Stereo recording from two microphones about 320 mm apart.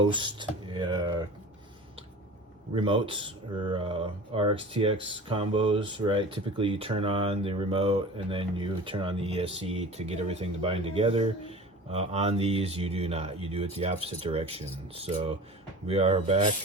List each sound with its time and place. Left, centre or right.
0.0 s speech: centre
2.7 s speech: centre